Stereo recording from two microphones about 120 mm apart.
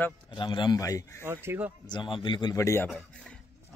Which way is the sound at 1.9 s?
45° left (ahead or behind).